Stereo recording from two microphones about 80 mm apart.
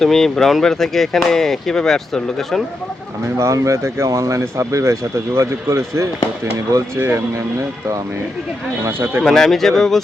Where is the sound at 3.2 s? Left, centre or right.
Right.